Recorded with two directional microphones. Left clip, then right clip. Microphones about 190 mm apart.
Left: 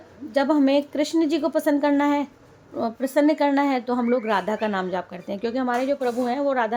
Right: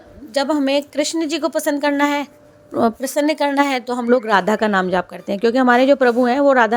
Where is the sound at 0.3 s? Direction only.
35° right (ahead or behind).